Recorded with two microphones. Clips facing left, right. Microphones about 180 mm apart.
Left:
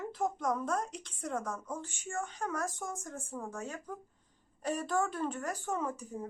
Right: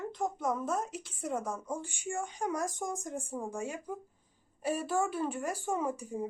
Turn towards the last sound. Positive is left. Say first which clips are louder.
# right 3 dB
turn(degrees=-10)  # may be behind; listen again after turning